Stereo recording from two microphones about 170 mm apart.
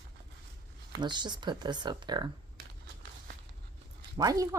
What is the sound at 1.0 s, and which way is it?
A woman's voice, 25° right (ahead or behind).